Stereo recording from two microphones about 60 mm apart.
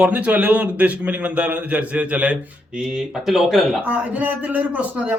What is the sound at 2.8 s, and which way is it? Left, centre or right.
Speech, centre.